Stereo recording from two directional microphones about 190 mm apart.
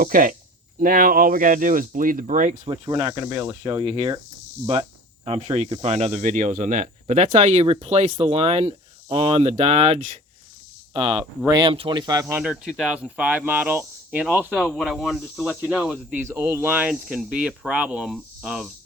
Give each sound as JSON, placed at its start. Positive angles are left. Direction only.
{"t": 0.0, "sound": "speech", "side_deg": -45}
{"t": 12.4, "sound": "speech", "side_deg": -5}
{"t": 14.5, "sound": "speech", "side_deg": 5}